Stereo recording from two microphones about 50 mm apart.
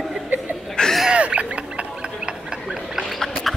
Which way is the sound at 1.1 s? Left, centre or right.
Right.